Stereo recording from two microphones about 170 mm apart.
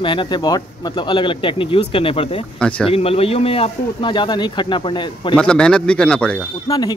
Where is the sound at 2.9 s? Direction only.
35° left (ahead or behind).